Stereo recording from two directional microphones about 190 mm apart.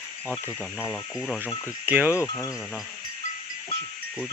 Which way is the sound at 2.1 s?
15° left (ahead or behind).